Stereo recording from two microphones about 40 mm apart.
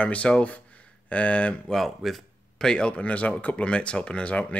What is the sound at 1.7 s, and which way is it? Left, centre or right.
Speech, centre.